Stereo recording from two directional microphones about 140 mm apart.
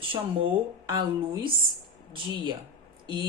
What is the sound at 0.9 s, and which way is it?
Speech, 35° right (ahead or behind).